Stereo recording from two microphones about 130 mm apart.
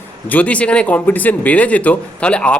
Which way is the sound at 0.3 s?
10° left (ahead or behind).